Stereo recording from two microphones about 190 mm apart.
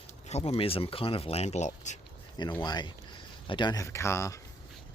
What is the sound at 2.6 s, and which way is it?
Speech, 25° left (ahead or behind).